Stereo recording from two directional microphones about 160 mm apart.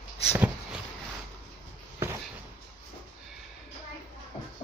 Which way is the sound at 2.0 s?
15° right (ahead or behind).